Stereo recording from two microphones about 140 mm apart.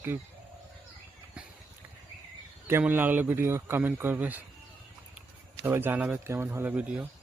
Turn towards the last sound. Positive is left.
turn(degrees=-10)  # may be behind; listen again after turning